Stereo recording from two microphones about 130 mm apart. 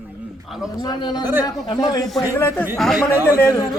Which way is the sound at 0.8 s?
35° left (ahead or behind).